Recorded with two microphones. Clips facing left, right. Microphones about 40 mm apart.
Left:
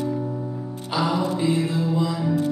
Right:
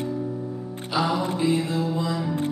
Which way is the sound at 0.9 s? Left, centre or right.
Centre.